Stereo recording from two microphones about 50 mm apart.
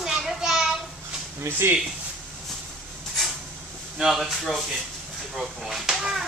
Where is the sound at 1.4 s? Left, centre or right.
Right.